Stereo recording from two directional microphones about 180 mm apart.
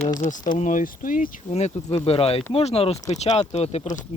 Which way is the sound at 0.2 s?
45° left (ahead or behind).